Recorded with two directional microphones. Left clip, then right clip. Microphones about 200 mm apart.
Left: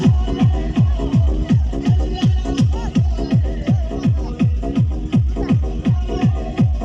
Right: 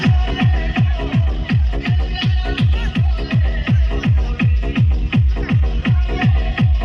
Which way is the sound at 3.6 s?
20° left (ahead or behind).